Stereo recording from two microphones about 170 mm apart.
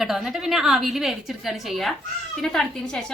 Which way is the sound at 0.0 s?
Centre (ahead or behind).